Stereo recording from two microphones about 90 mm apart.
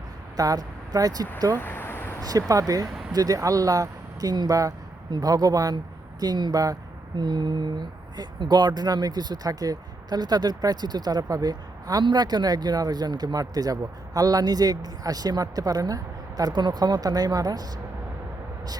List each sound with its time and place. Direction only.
0.3 s speech: 40° right (ahead or behind)
1.5 s a sound: 25° left (ahead or behind)
2.5 s speech: 40° right (ahead or behind)
7.2 s speech: 55° right (ahead or behind)
16.4 s speech: 55° right (ahead or behind)